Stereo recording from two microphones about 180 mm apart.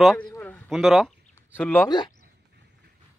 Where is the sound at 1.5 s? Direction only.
10° left (ahead or behind).